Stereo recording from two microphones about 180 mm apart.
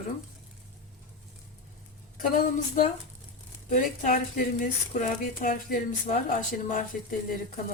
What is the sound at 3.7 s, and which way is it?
Speech, 45° left (ahead or behind).